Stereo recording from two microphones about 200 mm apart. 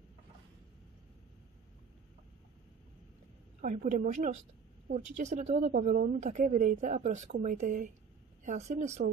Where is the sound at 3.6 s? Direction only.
40° right (ahead or behind).